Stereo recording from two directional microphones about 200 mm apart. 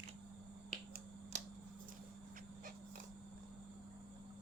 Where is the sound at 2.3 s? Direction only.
45° right (ahead or behind).